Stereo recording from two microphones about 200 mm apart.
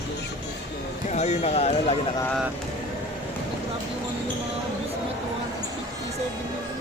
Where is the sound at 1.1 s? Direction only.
35° left (ahead or behind).